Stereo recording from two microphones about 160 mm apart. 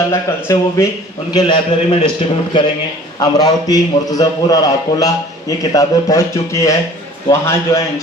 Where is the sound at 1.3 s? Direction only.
30° left (ahead or behind).